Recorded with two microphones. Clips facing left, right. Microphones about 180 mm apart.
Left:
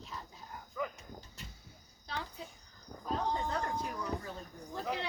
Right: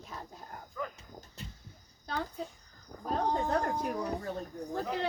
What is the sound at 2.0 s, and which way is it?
Cricket, 45° right (ahead or behind).